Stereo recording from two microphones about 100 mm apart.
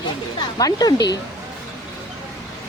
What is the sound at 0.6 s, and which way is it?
Speech, 40° left (ahead or behind).